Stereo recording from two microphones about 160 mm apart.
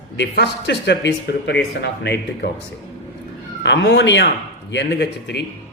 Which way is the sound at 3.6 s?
90° left.